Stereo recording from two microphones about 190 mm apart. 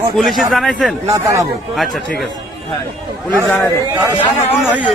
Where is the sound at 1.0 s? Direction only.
15° right (ahead or behind).